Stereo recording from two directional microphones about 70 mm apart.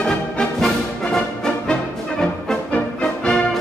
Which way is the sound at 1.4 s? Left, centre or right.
Centre.